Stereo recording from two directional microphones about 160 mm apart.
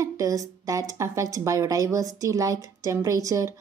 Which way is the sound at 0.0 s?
20° right (ahead or behind).